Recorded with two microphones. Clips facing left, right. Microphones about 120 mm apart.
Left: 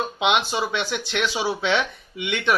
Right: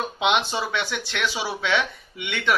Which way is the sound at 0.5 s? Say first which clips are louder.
Left 2 dB; 20° left (ahead or behind).